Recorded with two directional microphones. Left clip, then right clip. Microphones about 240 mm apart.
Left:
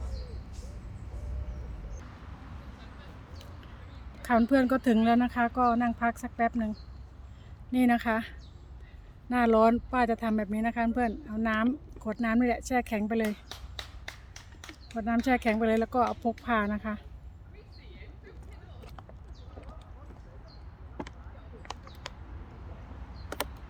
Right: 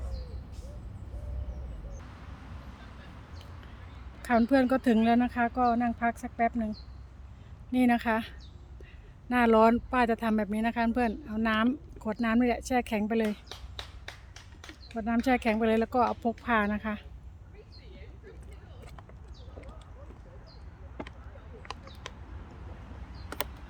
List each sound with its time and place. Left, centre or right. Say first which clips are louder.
4.2 s speech: even; centre
7.7 s speech: even; centre
13.5 s finger snapping: left 1 dB; left
14.9 s speech: even; centre